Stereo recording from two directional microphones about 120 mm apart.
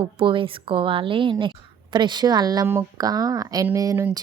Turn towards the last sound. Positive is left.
turn(degrees=-30)  # may be behind; listen again after turning